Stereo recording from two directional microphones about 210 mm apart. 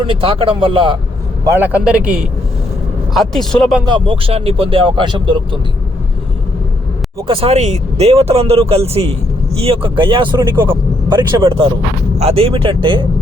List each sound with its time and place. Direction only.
0.0 s speech: 25° right (ahead or behind)
1.5 s a man's voice: 5° right (ahead or behind)
3.8 s speech: 25° right (ahead or behind)
7.3 s speech: 25° right (ahead or behind)